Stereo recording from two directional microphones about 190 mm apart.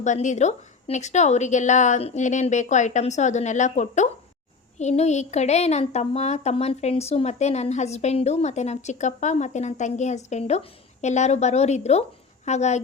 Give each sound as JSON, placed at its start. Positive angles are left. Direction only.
{"t": 0.0, "sound": "a woman's voice", "side_deg": 40}